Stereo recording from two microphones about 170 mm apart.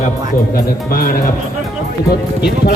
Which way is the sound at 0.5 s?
55° left (ahead or behind).